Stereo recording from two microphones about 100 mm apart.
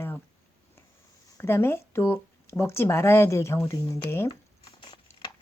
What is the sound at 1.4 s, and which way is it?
Speech, 25° left (ahead or behind).